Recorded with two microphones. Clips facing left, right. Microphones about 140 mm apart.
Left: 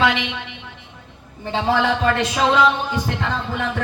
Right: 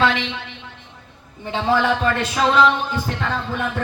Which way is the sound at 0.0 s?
15° left (ahead or behind).